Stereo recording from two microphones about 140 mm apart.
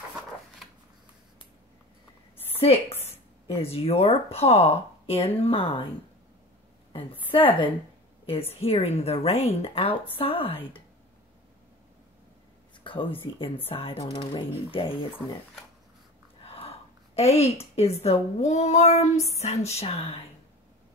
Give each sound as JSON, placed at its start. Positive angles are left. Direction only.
{"t": 2.6, "sound": "speech", "side_deg": 45}
{"t": 6.9, "sound": "a woman's voice", "side_deg": 40}
{"t": 12.8, "sound": "a woman's voice", "side_deg": 35}
{"t": 14.0, "sound": "speech", "side_deg": 30}
{"t": 16.4, "sound": "a woman's voice", "side_deg": 45}